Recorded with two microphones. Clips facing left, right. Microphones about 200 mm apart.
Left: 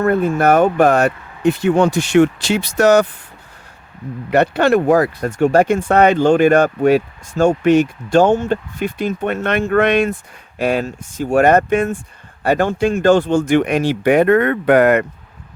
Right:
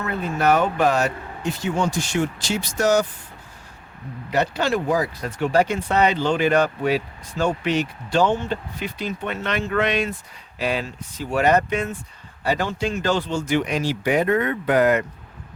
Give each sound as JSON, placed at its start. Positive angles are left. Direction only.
{"t": 0.0, "sound": "speech", "side_deg": 50}
{"t": 4.3, "sound": "speech", "side_deg": 60}